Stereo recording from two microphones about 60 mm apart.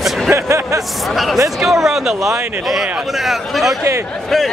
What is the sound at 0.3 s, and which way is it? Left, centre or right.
Speech, right.